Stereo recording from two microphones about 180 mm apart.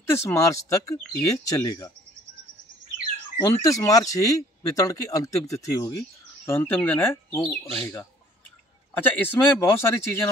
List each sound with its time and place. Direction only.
0.1 s a man's voice: 15° left (ahead or behind)
3.4 s speech: 20° left (ahead or behind)
8.9 s a man's voice: 10° left (ahead or behind)